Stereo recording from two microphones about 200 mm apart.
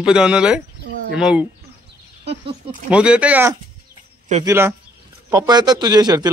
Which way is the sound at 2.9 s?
5° right (ahead or behind).